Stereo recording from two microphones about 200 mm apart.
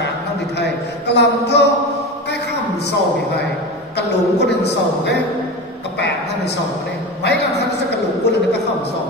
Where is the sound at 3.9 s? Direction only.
60° left (ahead or behind).